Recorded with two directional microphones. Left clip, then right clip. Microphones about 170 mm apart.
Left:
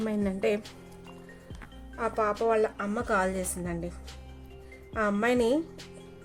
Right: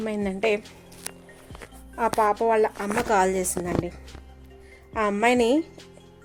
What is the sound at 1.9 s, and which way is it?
Speech, 40° right (ahead or behind).